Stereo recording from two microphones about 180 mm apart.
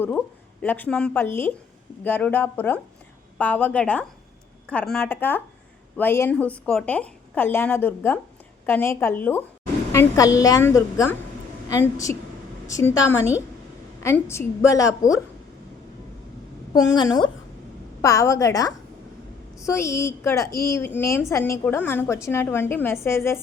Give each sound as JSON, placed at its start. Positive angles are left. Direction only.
{"t": 0.6, "sound": "a woman's voice", "side_deg": 10}
{"t": 16.7, "sound": "a woman's voice", "side_deg": 20}